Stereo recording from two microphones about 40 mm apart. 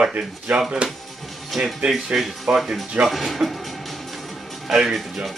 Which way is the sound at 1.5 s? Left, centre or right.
Centre.